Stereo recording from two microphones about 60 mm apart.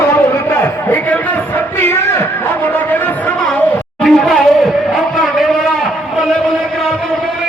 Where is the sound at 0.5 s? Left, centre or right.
Left.